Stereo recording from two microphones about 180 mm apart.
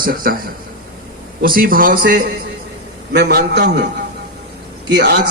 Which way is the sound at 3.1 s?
65° right (ahead or behind).